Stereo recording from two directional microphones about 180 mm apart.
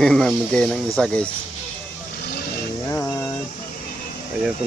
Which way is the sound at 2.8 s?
15° left (ahead or behind).